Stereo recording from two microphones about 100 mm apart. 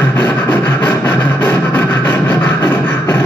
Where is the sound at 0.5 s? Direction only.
15° left (ahead or behind).